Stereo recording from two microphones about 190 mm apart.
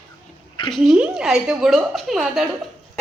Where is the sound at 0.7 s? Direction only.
5° right (ahead or behind).